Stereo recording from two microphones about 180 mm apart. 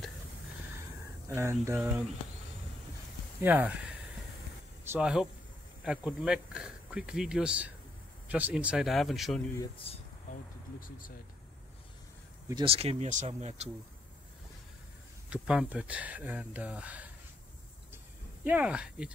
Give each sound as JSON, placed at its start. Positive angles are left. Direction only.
{"t": 1.3, "sound": "speech", "side_deg": -15}
{"t": 3.4, "sound": "speech", "side_deg": -10}
{"t": 4.8, "sound": "speech", "side_deg": -5}
{"t": 9.8, "sound": "speech", "side_deg": 30}
{"t": 10.3, "sound": "speech", "side_deg": 50}
{"t": 12.6, "sound": "speech", "side_deg": -35}
{"t": 15.2, "sound": "speech", "side_deg": -5}
{"t": 18.4, "sound": "speech", "side_deg": -5}